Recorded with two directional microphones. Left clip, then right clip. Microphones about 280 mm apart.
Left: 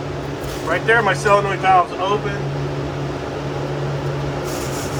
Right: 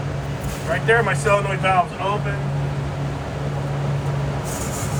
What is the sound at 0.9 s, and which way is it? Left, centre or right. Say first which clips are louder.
Speech: left 3 dB; left.